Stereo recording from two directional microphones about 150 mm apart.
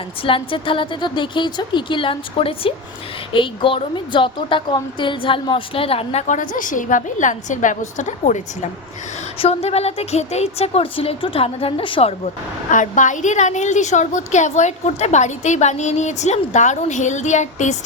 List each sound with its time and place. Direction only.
0.2 s a woman's voice: 35° left (ahead or behind); by 8.4 s 55° left (ahead or behind)
9.4 s a woman's voice: 40° left (ahead or behind)
12.7 s a woman's voice: 60° left (ahead or behind)